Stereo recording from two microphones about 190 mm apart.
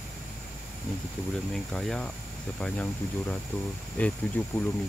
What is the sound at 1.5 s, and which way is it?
Speech, centre (ahead or behind).